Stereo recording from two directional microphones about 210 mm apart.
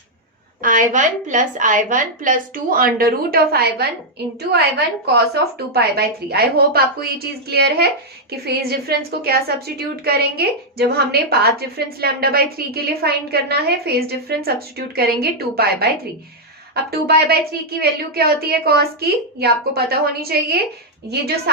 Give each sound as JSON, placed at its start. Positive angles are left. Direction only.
{"t": 0.6, "sound": "a woman's voice", "side_deg": -40}
{"t": 5.0, "sound": "a woman's voice", "side_deg": -50}